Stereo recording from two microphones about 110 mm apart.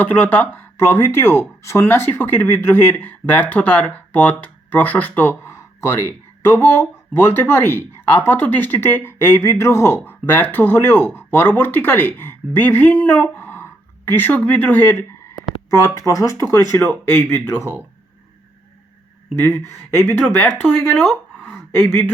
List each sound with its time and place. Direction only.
0.0 s speech: 15° left (ahead or behind)
16.0 s speech: 30° left (ahead or behind)
16.7 s speech: 20° left (ahead or behind)
19.4 s speech: 25° left (ahead or behind)
20.9 s speech: centre (ahead or behind)
21.5 s a sound: 20° left (ahead or behind)